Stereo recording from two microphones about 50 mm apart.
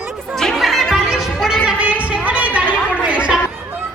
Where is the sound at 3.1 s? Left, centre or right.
Right.